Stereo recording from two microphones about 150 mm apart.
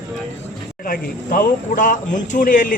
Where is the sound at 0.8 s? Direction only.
70° left (ahead or behind).